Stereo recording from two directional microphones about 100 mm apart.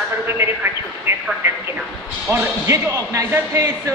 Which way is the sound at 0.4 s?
30° right (ahead or behind).